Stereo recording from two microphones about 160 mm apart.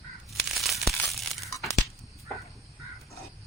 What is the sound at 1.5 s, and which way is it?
Tearing, 20° left (ahead or behind).